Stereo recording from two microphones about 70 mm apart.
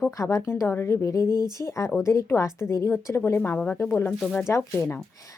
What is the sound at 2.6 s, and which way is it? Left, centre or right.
Speech, left.